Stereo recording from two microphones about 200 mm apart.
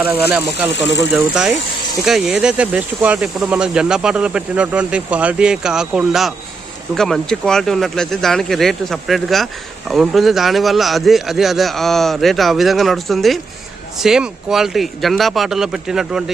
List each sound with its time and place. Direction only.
0.0 s speech: 10° right (ahead or behind)
0.7 s speech: 60° left (ahead or behind)
1.1 s speech: 5° right (ahead or behind)